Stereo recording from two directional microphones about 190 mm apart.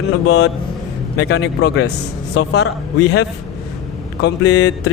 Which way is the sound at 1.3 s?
60° left (ahead or behind).